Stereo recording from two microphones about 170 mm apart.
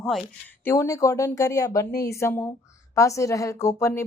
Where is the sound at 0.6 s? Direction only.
15° left (ahead or behind).